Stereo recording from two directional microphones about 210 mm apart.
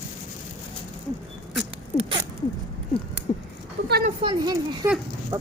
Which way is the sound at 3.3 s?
25° left (ahead or behind).